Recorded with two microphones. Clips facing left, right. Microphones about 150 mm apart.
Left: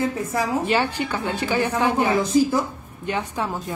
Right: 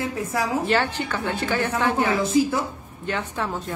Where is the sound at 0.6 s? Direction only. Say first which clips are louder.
Left 1 dB; 10° left (ahead or behind).